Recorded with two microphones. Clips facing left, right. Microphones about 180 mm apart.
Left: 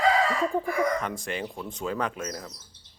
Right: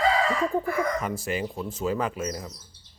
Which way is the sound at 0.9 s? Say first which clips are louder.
Right 3 dB; 5° right (ahead or behind).